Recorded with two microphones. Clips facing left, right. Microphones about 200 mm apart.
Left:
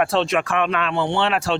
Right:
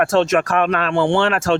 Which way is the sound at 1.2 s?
45° right (ahead or behind).